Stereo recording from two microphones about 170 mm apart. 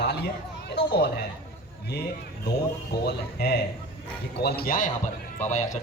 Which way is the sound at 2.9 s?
75° left (ahead or behind).